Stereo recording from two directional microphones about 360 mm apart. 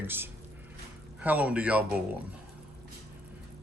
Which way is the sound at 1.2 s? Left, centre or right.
Centre.